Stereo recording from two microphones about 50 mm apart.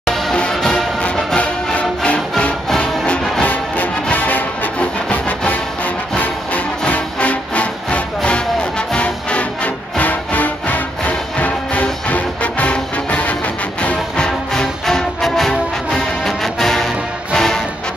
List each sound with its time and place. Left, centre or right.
0.0 s music: centre
1.0 s music: left
6.9 s music: left
14.1 s music: centre